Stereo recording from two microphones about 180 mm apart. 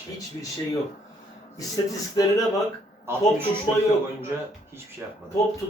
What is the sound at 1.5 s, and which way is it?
Speech, 20° left (ahead or behind).